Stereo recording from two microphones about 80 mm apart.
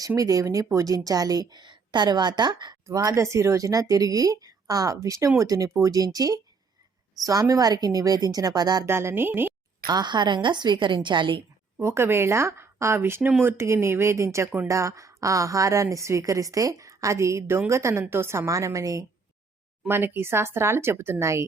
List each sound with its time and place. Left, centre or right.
0.2 s a woman's voice: right
2.8 s a woman's voice: right
8.9 s speech: right
9.8 s a woman's voice: right
11.8 s a woman's voice: right
19.9 s speech: right